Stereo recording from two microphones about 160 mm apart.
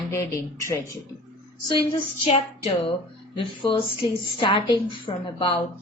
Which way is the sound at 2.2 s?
40° left (ahead or behind).